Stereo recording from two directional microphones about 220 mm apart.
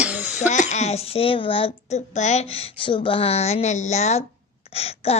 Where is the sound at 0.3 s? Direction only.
35° left (ahead or behind).